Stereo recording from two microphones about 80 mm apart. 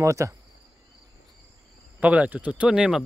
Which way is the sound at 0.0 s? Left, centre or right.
Right.